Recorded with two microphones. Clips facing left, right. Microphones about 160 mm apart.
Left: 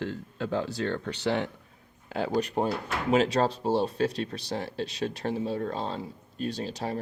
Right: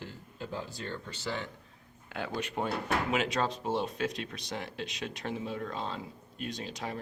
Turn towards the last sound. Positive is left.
turn(degrees=35)  # may be behind; listen again after turning